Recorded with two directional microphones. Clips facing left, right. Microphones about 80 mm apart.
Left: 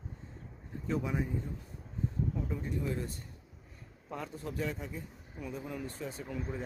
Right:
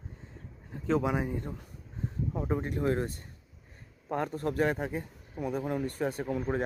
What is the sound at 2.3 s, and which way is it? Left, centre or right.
A man's voice, right.